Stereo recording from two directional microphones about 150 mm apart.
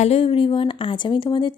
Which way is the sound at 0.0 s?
40° left (ahead or behind).